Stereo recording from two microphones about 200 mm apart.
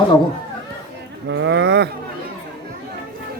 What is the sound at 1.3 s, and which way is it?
Speech, 65° right (ahead or behind).